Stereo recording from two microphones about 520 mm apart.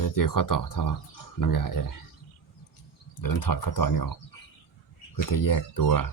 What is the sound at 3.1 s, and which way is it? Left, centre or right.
Speech, left.